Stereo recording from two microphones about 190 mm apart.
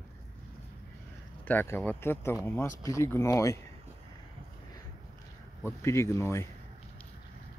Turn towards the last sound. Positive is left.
turn(degrees=15)  # may be behind; listen again after turning